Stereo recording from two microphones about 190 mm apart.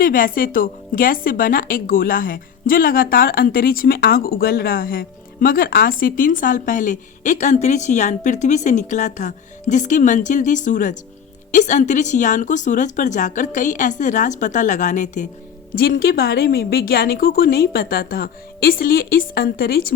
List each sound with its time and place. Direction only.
0.0 s a woman's voice: 45° left (ahead or behind)